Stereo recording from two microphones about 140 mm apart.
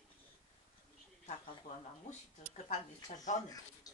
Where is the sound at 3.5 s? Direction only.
25° left (ahead or behind).